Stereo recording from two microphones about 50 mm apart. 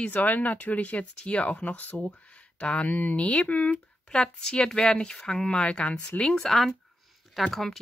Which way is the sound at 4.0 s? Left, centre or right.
Centre.